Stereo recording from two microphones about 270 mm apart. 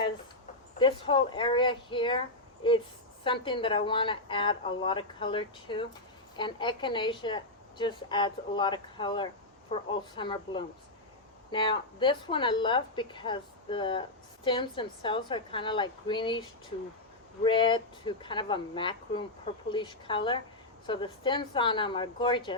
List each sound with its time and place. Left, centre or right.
0.8 s a woman's voice: centre
3.2 s a woman's voice: centre
17.4 s a woman's voice: centre